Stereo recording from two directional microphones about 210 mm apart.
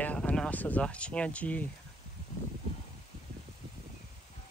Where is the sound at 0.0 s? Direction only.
5° left (ahead or behind).